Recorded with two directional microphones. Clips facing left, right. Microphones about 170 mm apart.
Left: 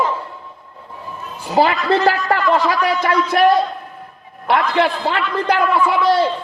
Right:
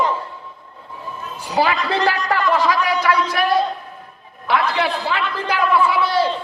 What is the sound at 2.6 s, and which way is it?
Speech, 50° left (ahead or behind).